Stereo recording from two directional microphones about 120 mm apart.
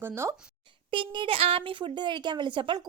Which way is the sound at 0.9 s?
45° right (ahead or behind).